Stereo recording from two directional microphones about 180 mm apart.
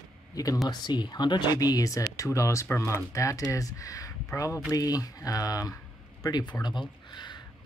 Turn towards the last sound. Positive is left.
turn(degrees=25)  # may be behind; listen again after turning